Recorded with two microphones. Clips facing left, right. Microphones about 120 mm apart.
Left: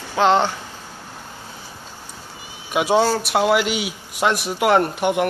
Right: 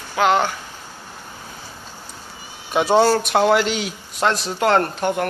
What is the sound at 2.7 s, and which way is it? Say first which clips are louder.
A man's voice: right 2 dB; 5° left (ahead or behind).